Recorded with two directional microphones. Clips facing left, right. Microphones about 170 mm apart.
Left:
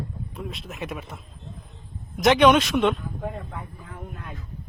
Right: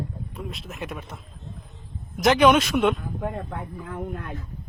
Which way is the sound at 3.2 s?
70° right (ahead or behind).